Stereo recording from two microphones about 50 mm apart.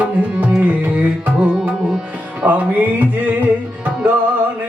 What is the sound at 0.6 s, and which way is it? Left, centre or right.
Music, right.